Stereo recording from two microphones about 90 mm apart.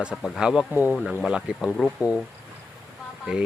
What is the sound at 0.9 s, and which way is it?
Speech, centre (ahead or behind).